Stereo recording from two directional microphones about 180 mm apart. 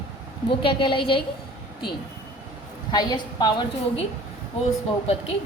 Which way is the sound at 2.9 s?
25° left (ahead or behind).